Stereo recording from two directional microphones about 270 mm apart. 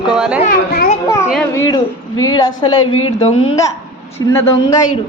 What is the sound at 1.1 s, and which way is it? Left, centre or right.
A woman's voice, centre.